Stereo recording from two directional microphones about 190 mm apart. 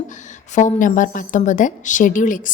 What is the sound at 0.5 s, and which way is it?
A woman's voice, 40° left (ahead or behind).